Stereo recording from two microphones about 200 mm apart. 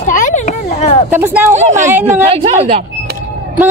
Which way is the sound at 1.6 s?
35° right (ahead or behind).